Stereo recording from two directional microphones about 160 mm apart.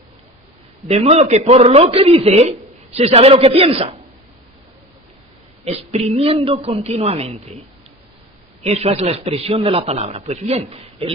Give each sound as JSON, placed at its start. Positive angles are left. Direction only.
{"t": 0.8, "sound": "a man's voice", "side_deg": -40}
{"t": 5.7, "sound": "a man's voice", "side_deg": -40}
{"t": 8.6, "sound": "a man's voice", "side_deg": -40}